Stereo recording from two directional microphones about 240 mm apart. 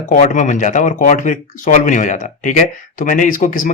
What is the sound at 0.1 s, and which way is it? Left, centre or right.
Speech, left.